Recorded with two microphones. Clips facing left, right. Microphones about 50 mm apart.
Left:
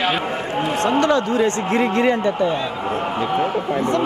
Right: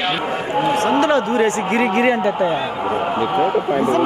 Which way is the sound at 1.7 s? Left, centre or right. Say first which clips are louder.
Right 1 dB; right.